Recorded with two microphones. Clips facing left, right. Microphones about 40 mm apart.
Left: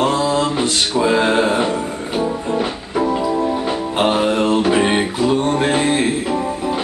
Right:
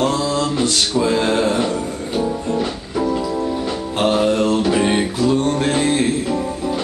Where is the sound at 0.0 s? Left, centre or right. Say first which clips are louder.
Left 2 dB; left.